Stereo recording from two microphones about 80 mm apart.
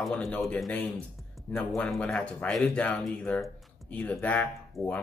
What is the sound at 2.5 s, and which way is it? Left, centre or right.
Speech, centre.